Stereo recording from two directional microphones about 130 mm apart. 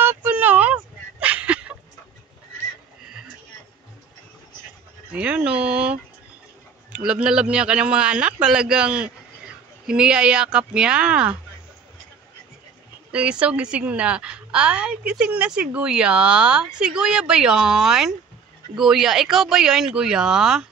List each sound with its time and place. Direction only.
0.0 s a sound: 15° right (ahead or behind)
5.1 s a woman's voice: 10° right (ahead or behind)
13.1 s a woman's voice: 10° right (ahead or behind)